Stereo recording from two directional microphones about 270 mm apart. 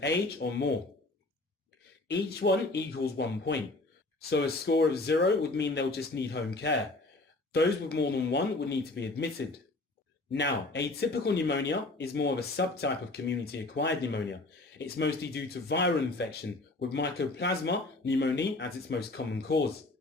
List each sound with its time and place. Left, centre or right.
0.0 s speech: left
2.0 s speech: left
10.3 s speech: left